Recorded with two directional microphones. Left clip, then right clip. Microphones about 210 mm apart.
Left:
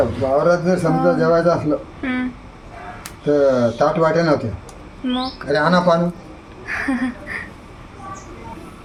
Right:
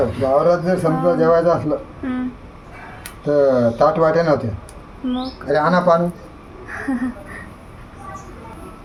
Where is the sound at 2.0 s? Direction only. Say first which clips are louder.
Left 2 dB; 5° left (ahead or behind).